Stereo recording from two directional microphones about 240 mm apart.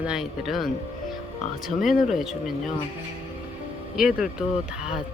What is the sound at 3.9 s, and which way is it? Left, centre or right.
Speech, centre.